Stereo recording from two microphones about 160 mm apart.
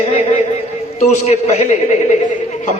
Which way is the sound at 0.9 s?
45° left (ahead or behind).